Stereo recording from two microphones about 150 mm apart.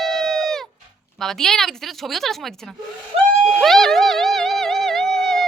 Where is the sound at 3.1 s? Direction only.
45° right (ahead or behind).